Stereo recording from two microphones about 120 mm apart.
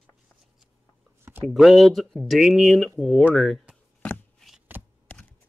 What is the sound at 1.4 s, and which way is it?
Speech, centre (ahead or behind).